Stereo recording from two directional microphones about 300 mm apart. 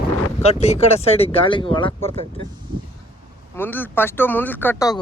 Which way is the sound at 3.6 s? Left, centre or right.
Centre.